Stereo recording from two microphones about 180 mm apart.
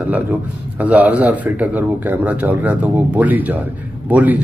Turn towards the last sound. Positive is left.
turn(degrees=-10)  # may be behind; listen again after turning